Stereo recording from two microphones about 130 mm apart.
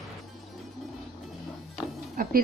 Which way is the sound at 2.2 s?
90° right.